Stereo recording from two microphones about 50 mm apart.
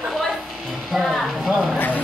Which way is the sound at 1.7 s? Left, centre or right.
Left.